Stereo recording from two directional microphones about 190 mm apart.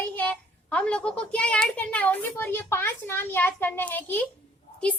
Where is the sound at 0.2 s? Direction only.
5° left (ahead or behind).